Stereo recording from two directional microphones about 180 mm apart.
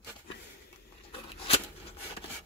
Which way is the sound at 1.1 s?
30° left (ahead or behind).